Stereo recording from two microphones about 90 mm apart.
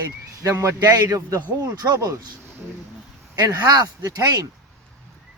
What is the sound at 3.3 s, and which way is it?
Speech, 45° right (ahead or behind).